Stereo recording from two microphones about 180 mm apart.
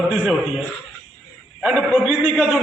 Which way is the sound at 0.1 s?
Centre (ahead or behind).